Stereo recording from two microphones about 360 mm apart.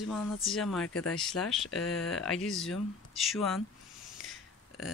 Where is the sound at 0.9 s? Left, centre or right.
Left.